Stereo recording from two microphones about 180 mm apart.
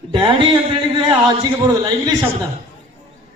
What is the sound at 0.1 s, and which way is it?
A man's voice, 25° right (ahead or behind).